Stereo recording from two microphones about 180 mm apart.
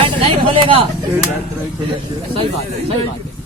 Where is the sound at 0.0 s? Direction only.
30° right (ahead or behind).